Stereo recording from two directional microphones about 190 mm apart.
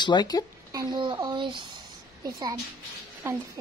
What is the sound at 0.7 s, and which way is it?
Speech, 20° right (ahead or behind).